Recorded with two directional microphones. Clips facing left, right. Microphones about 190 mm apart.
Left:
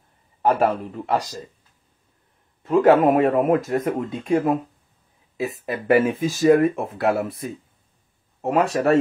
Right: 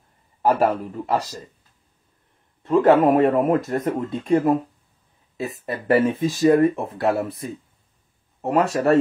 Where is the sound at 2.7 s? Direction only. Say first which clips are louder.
Even; centre (ahead or behind).